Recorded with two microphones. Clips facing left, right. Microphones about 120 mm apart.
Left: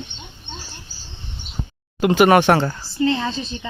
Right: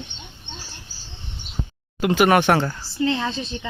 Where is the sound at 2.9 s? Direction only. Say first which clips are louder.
Left 2 dB; 70° right (ahead or behind).